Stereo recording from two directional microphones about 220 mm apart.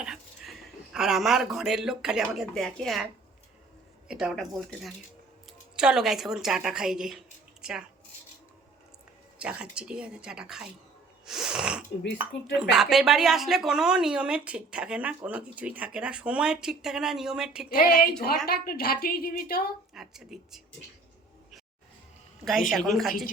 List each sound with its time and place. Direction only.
0.0 s dog: 5° right (ahead or behind)
0.9 s speech: centre (ahead or behind)
4.1 s speech: centre (ahead or behind)
9.4 s speech: 5° right (ahead or behind)
11.3 s wheeze: centre (ahead or behind)
12.1 s speech: 5° right (ahead or behind)
17.7 s a woman's voice: 40° left (ahead or behind)
19.9 s speech: centre (ahead or behind)
22.7 s speech: centre (ahead or behind)